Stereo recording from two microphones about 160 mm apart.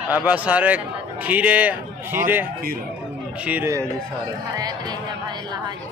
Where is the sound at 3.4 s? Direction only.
15° right (ahead or behind).